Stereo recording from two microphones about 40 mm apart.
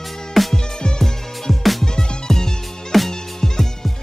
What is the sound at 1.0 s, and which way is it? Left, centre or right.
Music, centre.